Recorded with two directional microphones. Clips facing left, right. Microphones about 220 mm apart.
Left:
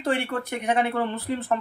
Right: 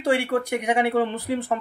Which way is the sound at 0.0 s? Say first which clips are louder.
Right 4 dB; 15° right (ahead or behind).